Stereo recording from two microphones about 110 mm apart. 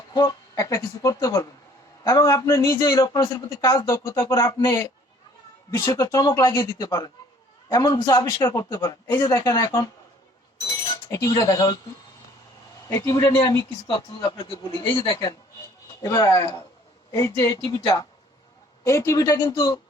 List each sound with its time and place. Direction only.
0.2 s speech: 30° left (ahead or behind)
3.1 s speech: 40° left (ahead or behind)
3.6 s speech: 30° left (ahead or behind)
5.9 s speech: 30° left (ahead or behind)
11.1 s speech: 35° left (ahead or behind)
12.9 s speech: 30° left (ahead or behind)
13.8 s speech: 45° left (ahead or behind)
16.0 s speech: 30° left (ahead or behind)